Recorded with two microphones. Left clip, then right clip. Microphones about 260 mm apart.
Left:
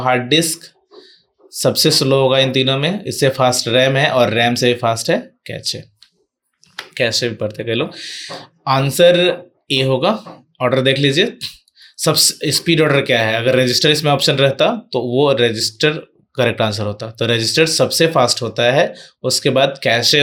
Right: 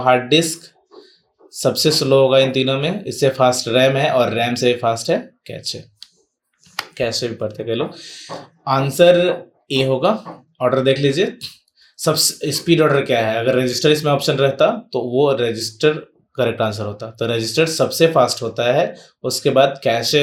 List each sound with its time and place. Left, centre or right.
0.3 s speech: left
6.9 s speech: left